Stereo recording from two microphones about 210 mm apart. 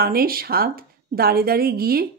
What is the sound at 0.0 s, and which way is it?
Speech, 45° right (ahead or behind).